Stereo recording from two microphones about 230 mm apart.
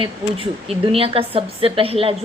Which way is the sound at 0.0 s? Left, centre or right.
Right.